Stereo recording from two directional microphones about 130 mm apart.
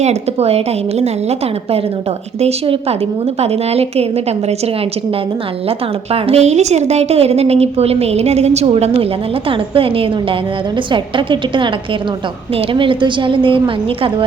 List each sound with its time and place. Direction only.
0.0 s a woman's voice: 55° right (ahead or behind)